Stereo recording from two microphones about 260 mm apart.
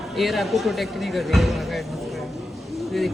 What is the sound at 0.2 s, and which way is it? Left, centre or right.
A woman's voice, centre.